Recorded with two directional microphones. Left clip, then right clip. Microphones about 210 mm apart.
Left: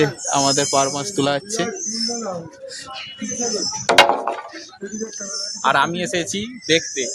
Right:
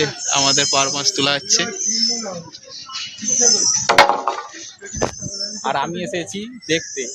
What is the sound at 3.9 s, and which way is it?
Wood, 45° left (ahead or behind).